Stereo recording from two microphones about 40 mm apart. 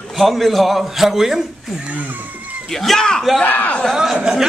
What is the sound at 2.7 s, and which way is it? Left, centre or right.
Speech, centre.